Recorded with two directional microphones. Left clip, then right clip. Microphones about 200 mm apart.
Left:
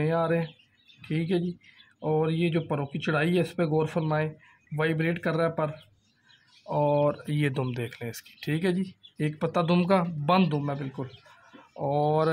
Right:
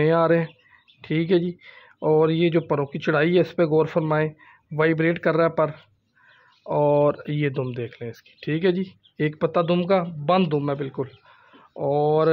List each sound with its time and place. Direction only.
0.0 s speech: 20° right (ahead or behind)
9.8 s speech: centre (ahead or behind)
10.5 s a man's voice: 25° right (ahead or behind)
11.7 s speech: 10° right (ahead or behind)